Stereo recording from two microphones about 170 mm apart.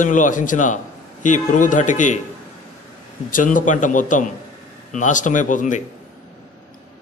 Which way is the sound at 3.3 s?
50° left (ahead or behind).